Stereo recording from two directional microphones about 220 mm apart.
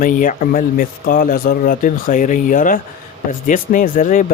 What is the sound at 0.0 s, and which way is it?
A man's voice, 35° left (ahead or behind).